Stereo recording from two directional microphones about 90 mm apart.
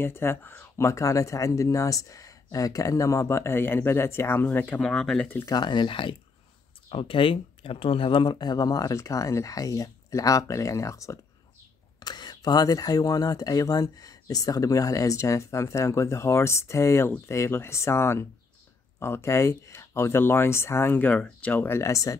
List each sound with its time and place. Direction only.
0.0 s speech: 25° left (ahead or behind)
4.8 s speech: 5° left (ahead or behind)
5.4 s speech: 50° left (ahead or behind); by 6.1 s 65° left (ahead or behind)
6.9 s speech: 85° left; by 11.1 s 35° left (ahead or behind)
12.0 s speech: 50° left (ahead or behind); by 22.1 s 35° left (ahead or behind)